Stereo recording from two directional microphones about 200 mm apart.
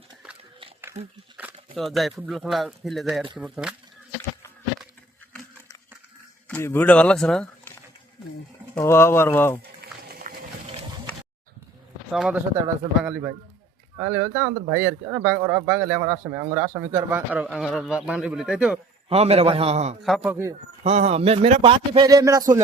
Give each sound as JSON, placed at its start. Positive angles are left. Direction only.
{"t": 1.0, "sound": "a man's voice", "side_deg": -35}
{"t": 1.4, "sound": "a sound", "side_deg": -10}
{"t": 1.7, "sound": "a man's voice", "side_deg": 0}
{"t": 6.5, "sound": "speech", "side_deg": 10}
{"t": 8.7, "sound": "speech", "side_deg": 10}
{"t": 9.8, "sound": "a sound", "side_deg": -50}
{"t": 12.1, "sound": "a man's voice", "side_deg": -5}
{"t": 19.0, "sound": "a man's voice", "side_deg": -30}
{"t": 20.0, "sound": "a man's voice", "side_deg": 0}
{"t": 20.3, "sound": "speech", "side_deg": -10}
{"t": 20.8, "sound": "a man's voice", "side_deg": -35}